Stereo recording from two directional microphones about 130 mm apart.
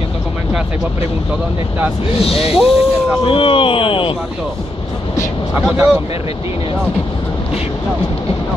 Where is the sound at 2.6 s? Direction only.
5° right (ahead or behind).